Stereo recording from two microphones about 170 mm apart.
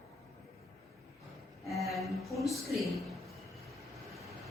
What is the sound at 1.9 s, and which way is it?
Speech, centre (ahead or behind).